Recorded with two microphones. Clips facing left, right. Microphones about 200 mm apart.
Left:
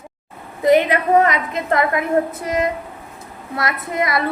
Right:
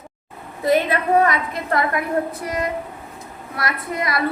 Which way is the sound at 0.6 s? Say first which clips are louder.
Left 4 dB; 15° left (ahead or behind).